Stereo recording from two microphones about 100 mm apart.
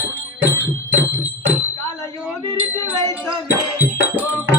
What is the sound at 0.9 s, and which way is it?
Music, 20° right (ahead or behind).